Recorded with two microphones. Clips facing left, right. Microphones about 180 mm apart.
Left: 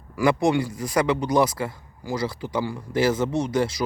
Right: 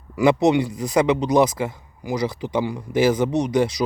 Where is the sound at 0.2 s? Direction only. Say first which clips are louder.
Right 4 dB; 20° right (ahead or behind).